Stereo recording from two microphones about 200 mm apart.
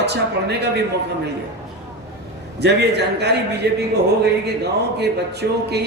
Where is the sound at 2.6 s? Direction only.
55° right (ahead or behind).